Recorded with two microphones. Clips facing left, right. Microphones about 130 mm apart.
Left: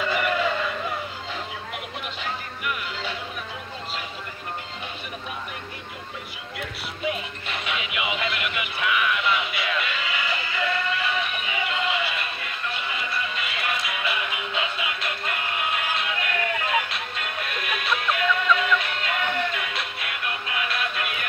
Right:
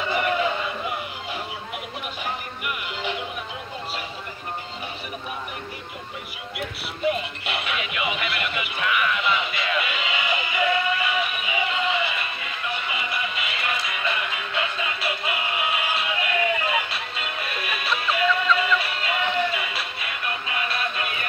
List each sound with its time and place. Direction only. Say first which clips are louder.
0.0 s a sound: right 1 dB; 15° right (ahead or behind)
2.2 s music: left 1 dB; 15° right (ahead or behind)
7.5 s music: right 1 dB; 5° right (ahead or behind)
13.6 s music: even; centre (ahead or behind)